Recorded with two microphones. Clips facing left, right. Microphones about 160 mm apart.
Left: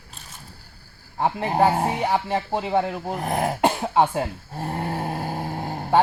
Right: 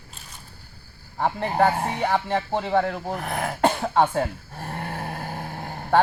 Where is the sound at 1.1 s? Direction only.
20° left (ahead or behind).